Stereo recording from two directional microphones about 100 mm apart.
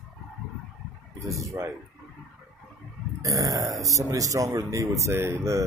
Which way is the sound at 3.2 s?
35° right (ahead or behind).